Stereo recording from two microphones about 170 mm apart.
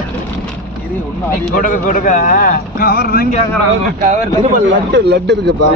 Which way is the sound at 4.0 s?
45° right (ahead or behind).